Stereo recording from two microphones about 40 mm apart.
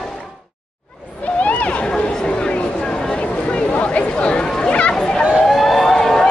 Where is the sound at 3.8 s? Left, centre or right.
Left.